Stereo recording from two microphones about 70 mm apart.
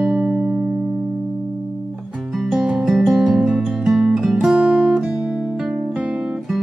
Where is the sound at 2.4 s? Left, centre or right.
Centre.